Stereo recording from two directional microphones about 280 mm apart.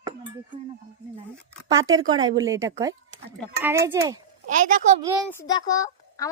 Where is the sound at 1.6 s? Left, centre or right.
Centre.